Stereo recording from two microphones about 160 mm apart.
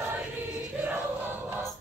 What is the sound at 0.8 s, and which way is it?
Choir, 10° right (ahead or behind).